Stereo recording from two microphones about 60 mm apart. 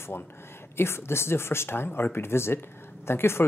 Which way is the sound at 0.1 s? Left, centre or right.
Left.